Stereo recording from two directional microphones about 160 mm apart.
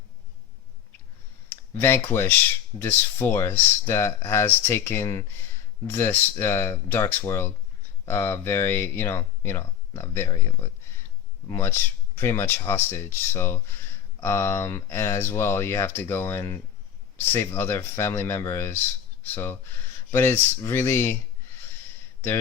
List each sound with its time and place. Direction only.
1.5 s speech: 15° left (ahead or behind)